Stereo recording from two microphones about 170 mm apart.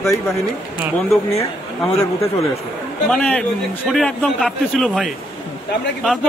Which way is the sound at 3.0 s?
5° left (ahead or behind).